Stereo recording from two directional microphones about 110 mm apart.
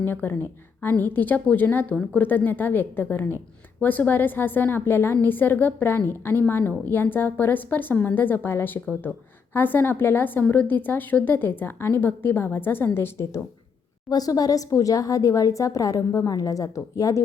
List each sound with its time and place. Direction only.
0.0 s a woman's voice: 20° left (ahead or behind)
14.1 s a woman's voice: 35° left (ahead or behind)